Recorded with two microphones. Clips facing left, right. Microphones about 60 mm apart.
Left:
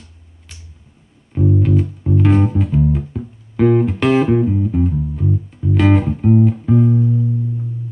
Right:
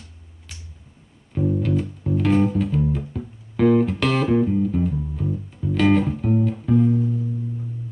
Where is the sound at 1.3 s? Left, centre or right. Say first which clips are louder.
Left 5 dB; centre.